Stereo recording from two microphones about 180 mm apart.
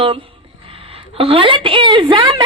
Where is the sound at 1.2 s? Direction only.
30° right (ahead or behind).